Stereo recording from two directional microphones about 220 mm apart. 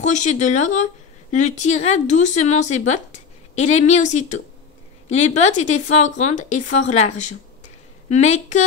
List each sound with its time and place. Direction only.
0.0 s speech: 35° left (ahead or behind)